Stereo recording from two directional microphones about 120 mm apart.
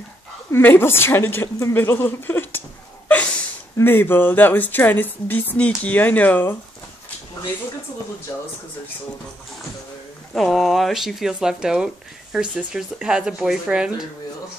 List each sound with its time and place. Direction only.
0.5 s a woman's voice: 20° left (ahead or behind)
3.7 s a woman's voice: 20° left (ahead or behind)
10.3 s speech: centre (ahead or behind)